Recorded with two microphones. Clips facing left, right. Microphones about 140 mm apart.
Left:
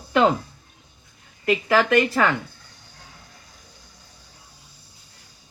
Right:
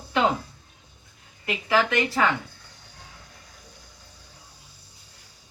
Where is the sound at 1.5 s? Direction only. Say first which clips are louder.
Left 4 dB; 55° left (ahead or behind).